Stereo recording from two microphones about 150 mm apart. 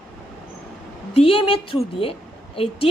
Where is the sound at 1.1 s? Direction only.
40° left (ahead or behind).